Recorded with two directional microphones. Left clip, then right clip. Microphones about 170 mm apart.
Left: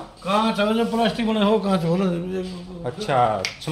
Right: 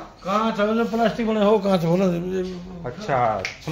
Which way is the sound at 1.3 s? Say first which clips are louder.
Right 4 dB; 30° right (ahead or behind).